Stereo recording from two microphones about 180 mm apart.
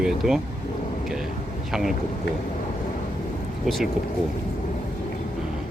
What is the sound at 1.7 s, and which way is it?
Speech, centre (ahead or behind).